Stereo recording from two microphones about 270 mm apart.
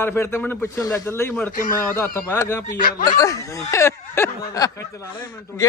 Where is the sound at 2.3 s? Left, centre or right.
Centre.